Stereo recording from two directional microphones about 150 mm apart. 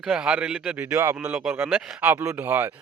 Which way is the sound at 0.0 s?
5° right (ahead or behind).